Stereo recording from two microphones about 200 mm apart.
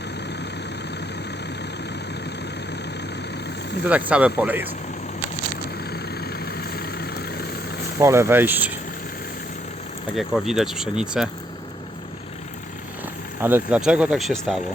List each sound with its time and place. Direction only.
3.8 s speech: 5° right (ahead or behind)
5.9 s vehicle: 50° left (ahead or behind)
7.9 s speech: 15° right (ahead or behind)
10.2 s speech: centre (ahead or behind)
13.4 s speech: 5° right (ahead or behind)